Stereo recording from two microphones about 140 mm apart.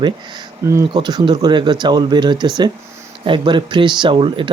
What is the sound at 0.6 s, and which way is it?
Speech, 20° right (ahead or behind).